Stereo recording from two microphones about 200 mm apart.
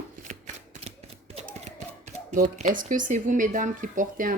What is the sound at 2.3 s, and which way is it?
Speech, 40° right (ahead or behind).